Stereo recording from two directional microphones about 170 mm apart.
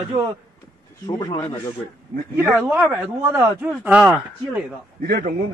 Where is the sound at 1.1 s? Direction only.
25° left (ahead or behind).